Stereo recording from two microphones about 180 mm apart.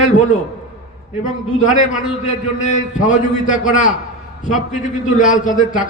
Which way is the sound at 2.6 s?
45° left (ahead or behind).